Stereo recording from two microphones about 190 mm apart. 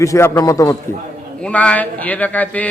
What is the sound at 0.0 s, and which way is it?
Speech, 15° left (ahead or behind).